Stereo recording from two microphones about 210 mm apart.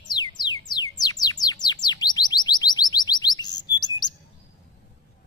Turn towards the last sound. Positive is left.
turn(degrees=20)  # may be behind; listen again after turning